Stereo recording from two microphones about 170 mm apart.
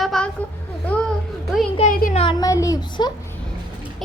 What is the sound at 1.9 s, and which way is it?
Speech, 50° left (ahead or behind).